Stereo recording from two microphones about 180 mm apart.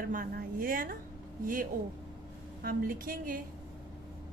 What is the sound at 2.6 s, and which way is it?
Speech, 55° right (ahead or behind).